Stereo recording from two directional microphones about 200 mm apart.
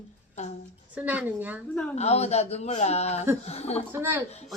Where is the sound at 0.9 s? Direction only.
10° right (ahead or behind).